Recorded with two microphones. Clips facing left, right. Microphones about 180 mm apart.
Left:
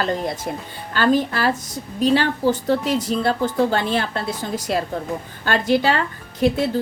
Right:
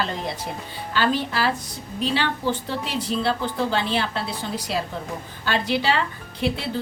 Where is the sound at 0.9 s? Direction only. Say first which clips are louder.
Left 5 dB; 45° left (ahead or behind).